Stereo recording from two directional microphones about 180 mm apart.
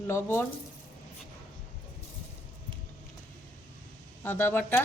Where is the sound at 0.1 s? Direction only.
15° left (ahead or behind).